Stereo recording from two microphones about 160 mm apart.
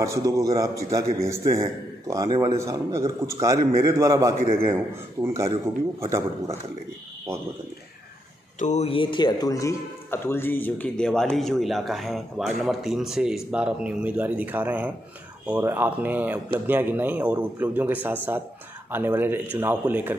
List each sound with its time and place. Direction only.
0.0 s a man's voice: 20° right (ahead or behind)
8.5 s a man's voice: 45° left (ahead or behind); by 20.2 s 10° right (ahead or behind)